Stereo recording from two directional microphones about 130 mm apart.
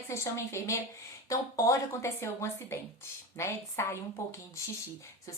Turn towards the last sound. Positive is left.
turn(degrees=20)  # may be behind; listen again after turning